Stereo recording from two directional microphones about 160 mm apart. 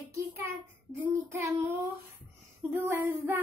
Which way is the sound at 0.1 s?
15° right (ahead or behind).